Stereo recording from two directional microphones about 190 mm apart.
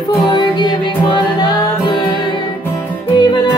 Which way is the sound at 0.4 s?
20° left (ahead or behind).